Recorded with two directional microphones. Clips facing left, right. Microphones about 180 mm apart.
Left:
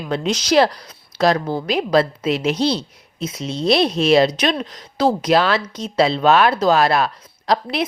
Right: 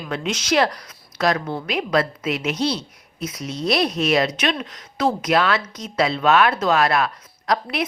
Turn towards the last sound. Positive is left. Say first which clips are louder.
# left 3 dB
turn(degrees=30)  # may be behind; listen again after turning